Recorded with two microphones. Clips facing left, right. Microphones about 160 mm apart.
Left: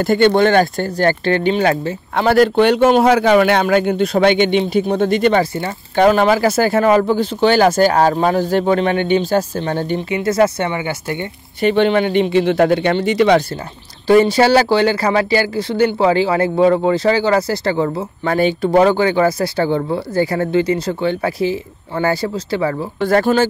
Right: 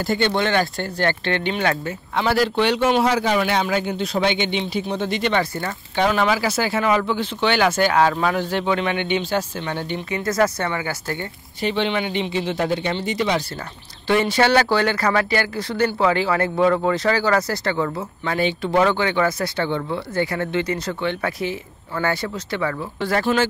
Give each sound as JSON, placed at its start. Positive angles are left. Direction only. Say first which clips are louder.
{"t": 0.0, "sound": "speech", "louder": "left 8 dB", "side_deg": 55}
{"t": 2.1, "sound": "a man's voice", "louder": "left 7 dB", "side_deg": 55}
{"t": 5.4, "sound": "speech", "louder": "left 6 dB", "side_deg": 25}
{"t": 5.9, "sound": "speech", "louder": "left 7 dB", "side_deg": 45}
{"t": 10.0, "sound": "speech", "louder": "left 5 dB", "side_deg": 25}
{"t": 11.6, "sound": "a man's voice", "louder": "left 8 dB", "side_deg": 50}
{"t": 14.0, "sound": "speech", "louder": "left 7 dB", "side_deg": 35}
{"t": 18.2, "sound": "speech", "louder": "left 7 dB", "side_deg": 40}
{"t": 22.9, "sound": "speech", "louder": "left 6 dB", "side_deg": 50}